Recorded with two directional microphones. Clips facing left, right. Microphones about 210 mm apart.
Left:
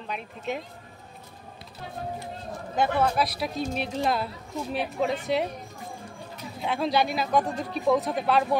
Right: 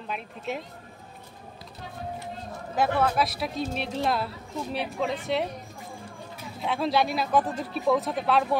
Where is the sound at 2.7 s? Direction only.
Centre (ahead or behind).